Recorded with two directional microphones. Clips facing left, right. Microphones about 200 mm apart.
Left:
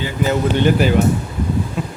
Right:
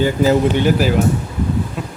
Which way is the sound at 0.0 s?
35° right (ahead or behind).